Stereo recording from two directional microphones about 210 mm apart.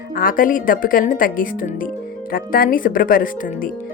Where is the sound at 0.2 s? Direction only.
40° left (ahead or behind).